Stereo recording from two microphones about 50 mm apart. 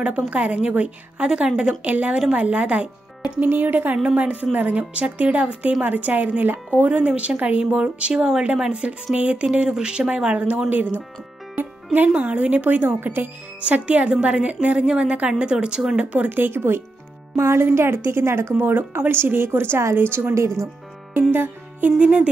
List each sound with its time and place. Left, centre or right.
0.3 s a woman's voice: right
1.9 s a woman's voice: right
3.4 s a woman's voice: right
4.0 s a woman's voice: right
9.1 s a woman's voice: right
11.5 s music: right
12.1 s a woman's voice: right
13.6 s a woman's voice: right
16.3 s speech: right
17.4 s speech: right
18.6 s speech: right
20.3 s speech: right
21.3 s music: right
21.9 s a woman's voice: right